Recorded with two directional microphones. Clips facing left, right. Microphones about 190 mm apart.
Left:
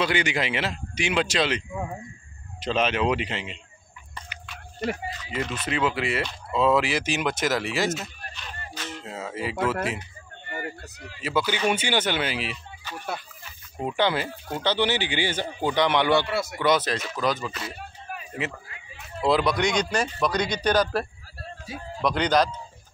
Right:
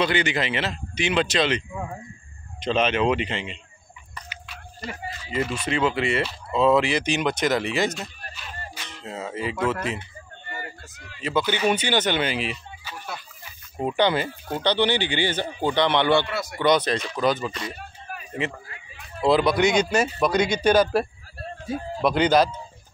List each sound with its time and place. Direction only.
0.0 s speech: 10° left (ahead or behind)
4.3 s a sound: 55° left (ahead or behind)
5.3 s speech: centre (ahead or behind)
11.2 s speech: 10° left (ahead or behind)
13.7 s speech: centre (ahead or behind)
16.3 s speech: 25° left (ahead or behind)
16.5 s speech: 5° left (ahead or behind)
19.2 s speech: centre (ahead or behind)